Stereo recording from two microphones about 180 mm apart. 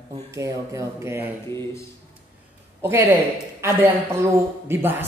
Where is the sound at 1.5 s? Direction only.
15° left (ahead or behind).